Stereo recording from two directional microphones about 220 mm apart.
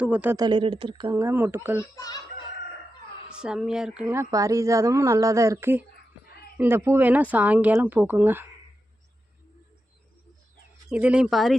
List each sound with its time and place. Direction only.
0.0 s speech: 5° right (ahead or behind)
1.8 s a child's voice: 15° left (ahead or behind)
3.4 s speech: 5° right (ahead or behind)
10.8 s speech: 5° right (ahead or behind)